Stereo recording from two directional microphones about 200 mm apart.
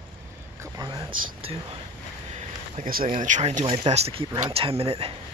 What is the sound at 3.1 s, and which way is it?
Speech, 35° right (ahead or behind).